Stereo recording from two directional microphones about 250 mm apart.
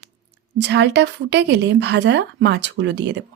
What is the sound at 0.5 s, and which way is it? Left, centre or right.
Speech, right.